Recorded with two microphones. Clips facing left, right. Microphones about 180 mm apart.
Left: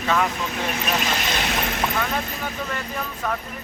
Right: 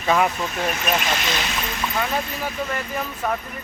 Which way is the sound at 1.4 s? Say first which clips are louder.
Left 3 dB; 55° left (ahead or behind).